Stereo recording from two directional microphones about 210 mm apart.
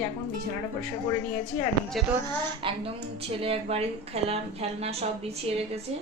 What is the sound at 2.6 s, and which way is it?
A woman's voice, 25° right (ahead or behind).